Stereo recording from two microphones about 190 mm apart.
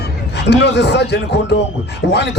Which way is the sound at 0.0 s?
60° left (ahead or behind).